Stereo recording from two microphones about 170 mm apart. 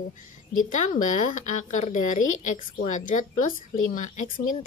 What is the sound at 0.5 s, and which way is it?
A woman's voice, 50° left (ahead or behind).